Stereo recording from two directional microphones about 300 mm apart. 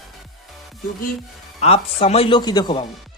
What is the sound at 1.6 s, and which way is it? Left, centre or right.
Speech, centre.